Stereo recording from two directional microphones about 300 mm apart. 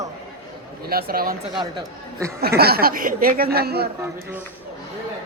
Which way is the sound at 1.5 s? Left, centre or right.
Centre.